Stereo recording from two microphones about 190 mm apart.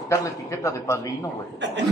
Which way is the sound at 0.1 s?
15° left (ahead or behind).